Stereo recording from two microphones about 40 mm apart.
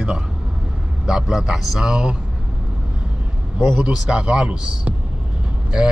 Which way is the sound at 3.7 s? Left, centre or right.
Centre.